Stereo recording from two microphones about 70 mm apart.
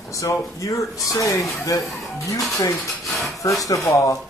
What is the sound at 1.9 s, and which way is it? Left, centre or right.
Speech, centre.